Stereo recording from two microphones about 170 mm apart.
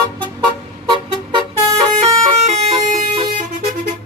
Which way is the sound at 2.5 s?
45° right (ahead or behind).